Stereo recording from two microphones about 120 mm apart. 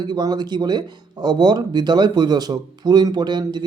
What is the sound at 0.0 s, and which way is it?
Speech, 35° right (ahead or behind).